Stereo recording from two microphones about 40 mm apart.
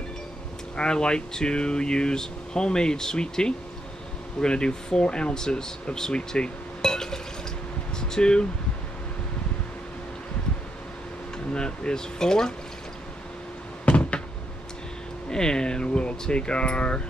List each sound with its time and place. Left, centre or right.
0.7 s speech: left
5.9 s cutlery: centre
8.1 s speech: left
11.3 s speech: left
15.3 s speech: centre